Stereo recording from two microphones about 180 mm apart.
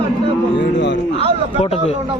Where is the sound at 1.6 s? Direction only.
35° left (ahead or behind).